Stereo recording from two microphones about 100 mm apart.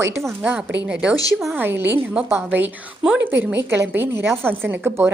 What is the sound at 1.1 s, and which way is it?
Speech, 40° left (ahead or behind).